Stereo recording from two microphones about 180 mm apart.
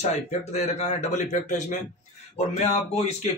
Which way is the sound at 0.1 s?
35° left (ahead or behind).